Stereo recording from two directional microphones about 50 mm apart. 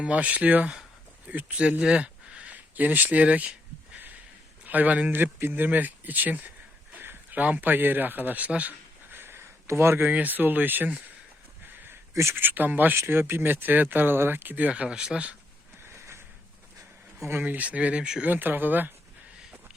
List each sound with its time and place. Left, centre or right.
0.0 s speech: right
4.6 s speech: right
9.0 s a sound: right
9.6 s speech: right
10.1 s speech: right
12.3 s speech: right
13.1 s speech: right
13.5 s speech: right
14.7 s speech: centre
15.8 s a sound: right
17.4 s speech: right
18.3 s speech: right